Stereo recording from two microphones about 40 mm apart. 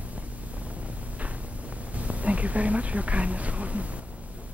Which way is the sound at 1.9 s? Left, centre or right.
Right.